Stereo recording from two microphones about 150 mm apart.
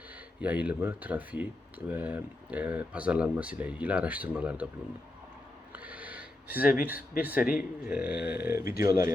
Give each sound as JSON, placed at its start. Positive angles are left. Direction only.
{"t": 0.3, "sound": "speech", "side_deg": -10}
{"t": 5.7, "sound": "a sound", "side_deg": -10}
{"t": 7.2, "sound": "speech", "side_deg": -10}